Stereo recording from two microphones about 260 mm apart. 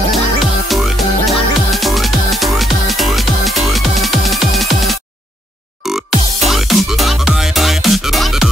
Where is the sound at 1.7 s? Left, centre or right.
Centre.